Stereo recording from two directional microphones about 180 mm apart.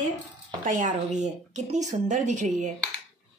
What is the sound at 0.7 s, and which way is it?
Speech, 45° right (ahead or behind).